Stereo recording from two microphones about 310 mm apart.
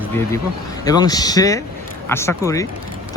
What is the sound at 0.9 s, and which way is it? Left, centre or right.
Speech, centre.